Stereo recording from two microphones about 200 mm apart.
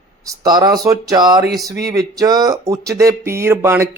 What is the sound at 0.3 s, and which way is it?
Speech, 20° right (ahead or behind).